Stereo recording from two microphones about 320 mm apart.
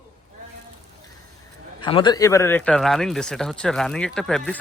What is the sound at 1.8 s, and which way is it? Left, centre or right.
Speech, centre.